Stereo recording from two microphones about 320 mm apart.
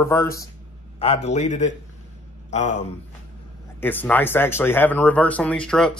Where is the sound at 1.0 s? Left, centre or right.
Centre.